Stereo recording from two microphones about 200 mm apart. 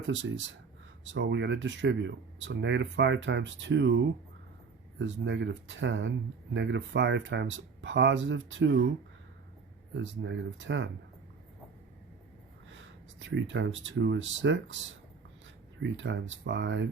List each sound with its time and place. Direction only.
0.1 s speech: 70° right (ahead or behind)
9.9 s speech: 65° right (ahead or behind)
12.7 s speech: 70° right (ahead or behind)